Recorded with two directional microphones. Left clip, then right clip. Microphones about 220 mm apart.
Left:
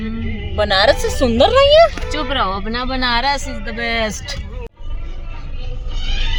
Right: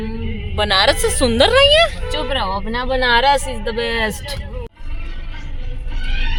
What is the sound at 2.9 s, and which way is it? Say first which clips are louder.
Speech: right 4 dB; 35° right (ahead or behind).